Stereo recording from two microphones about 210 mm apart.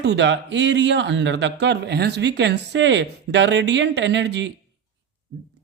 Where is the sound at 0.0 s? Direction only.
55° right (ahead or behind).